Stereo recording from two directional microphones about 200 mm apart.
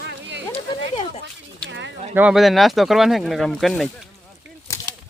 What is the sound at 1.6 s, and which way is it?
Speech, 60° right (ahead or behind).